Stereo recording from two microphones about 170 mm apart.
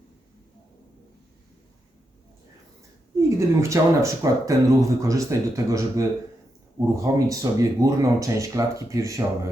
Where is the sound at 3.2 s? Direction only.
15° right (ahead or behind).